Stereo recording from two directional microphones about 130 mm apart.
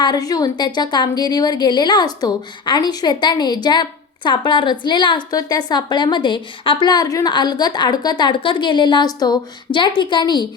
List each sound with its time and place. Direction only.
0.0 s a woman's voice: 30° left (ahead or behind)